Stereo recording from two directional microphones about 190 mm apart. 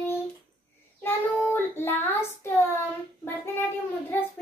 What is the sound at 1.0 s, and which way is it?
Child singing, 10° left (ahead or behind).